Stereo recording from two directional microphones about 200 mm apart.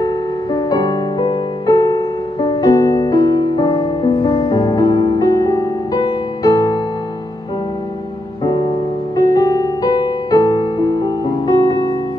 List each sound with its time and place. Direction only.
0.0 s music: 20° left (ahead or behind)
8.5 s music: 20° left (ahead or behind)